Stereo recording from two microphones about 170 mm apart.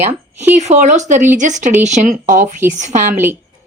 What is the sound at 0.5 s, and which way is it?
Speech, 40° right (ahead or behind).